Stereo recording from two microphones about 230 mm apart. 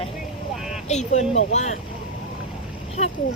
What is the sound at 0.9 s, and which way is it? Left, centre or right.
Speech, left.